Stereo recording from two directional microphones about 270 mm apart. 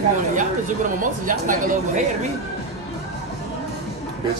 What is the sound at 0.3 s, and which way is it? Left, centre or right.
Speech, right.